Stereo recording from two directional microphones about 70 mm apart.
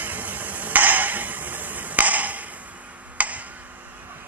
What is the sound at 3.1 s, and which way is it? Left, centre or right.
Tick-tock, right.